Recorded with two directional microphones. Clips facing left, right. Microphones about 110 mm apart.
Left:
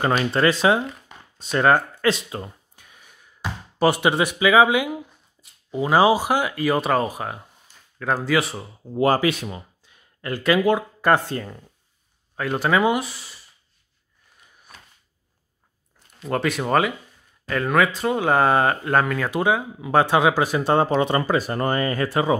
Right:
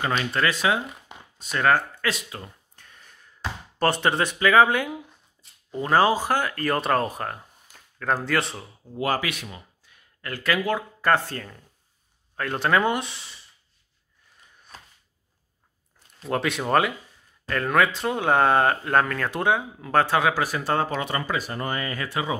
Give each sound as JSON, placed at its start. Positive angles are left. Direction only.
{"t": 0.0, "sound": "speech", "side_deg": 35}
{"t": 2.7, "sound": "a sound", "side_deg": 10}
{"t": 5.4, "sound": "speech", "side_deg": 10}
{"t": 8.9, "sound": "speech", "side_deg": 30}
{"t": 12.4, "sound": "speech", "side_deg": 5}
{"t": 16.3, "sound": "speech", "side_deg": 0}